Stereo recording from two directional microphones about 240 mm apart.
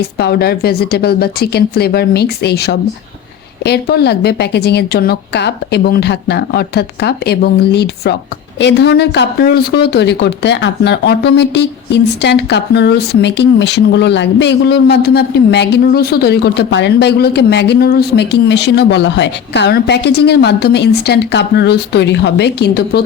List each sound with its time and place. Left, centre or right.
0.0 s a woman's voice: left